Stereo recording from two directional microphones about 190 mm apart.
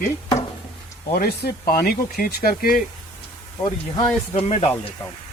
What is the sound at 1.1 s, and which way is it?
Speech, 50° left (ahead or behind).